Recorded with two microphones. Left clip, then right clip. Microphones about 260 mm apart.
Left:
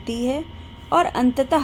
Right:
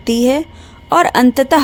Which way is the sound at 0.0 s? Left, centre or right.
Right.